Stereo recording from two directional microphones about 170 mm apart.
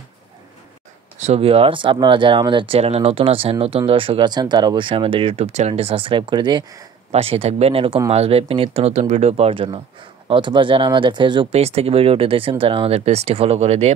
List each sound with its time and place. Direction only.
1.2 s speech: 35° right (ahead or behind)